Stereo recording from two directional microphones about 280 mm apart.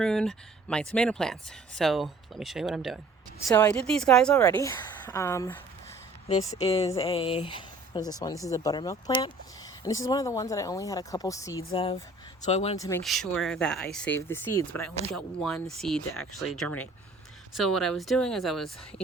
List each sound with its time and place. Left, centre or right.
0.0 s a woman's voice: centre
6.6 s speech: left
13.0 s speech: centre